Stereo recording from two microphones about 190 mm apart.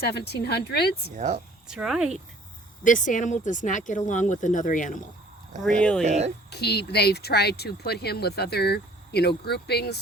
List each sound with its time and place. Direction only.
0.0 s speech: 60° left (ahead or behind)
1.1 s speech: 40° right (ahead or behind)
1.6 s speech: 5° right (ahead or behind)
2.8 s speech: 45° left (ahead or behind)
5.8 s speech: 5° left (ahead or behind)
6.1 s speech: 35° right (ahead or behind)
6.5 s speech: 60° left (ahead or behind)